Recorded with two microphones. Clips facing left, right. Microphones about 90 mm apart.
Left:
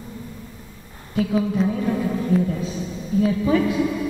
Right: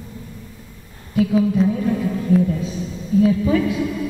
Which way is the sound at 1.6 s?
10° left (ahead or behind).